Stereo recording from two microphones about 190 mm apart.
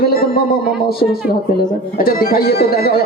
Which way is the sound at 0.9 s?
50° left (ahead or behind).